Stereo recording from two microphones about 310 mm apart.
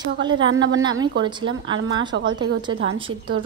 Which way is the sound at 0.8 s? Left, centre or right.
Centre.